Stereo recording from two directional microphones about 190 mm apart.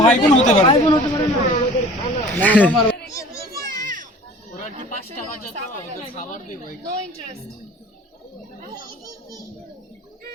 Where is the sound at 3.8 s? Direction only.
45° right (ahead or behind).